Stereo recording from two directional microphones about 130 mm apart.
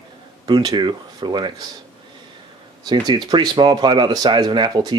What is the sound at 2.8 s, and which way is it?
Speech, 35° right (ahead or behind).